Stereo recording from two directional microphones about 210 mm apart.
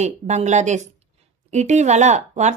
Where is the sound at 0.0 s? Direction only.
35° right (ahead or behind).